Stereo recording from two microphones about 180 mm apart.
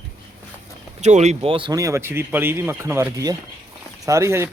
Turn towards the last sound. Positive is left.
turn(degrees=-15)  # may be behind; listen again after turning